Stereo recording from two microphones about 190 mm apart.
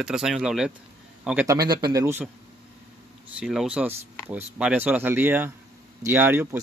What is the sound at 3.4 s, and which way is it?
Speech, 5° right (ahead or behind).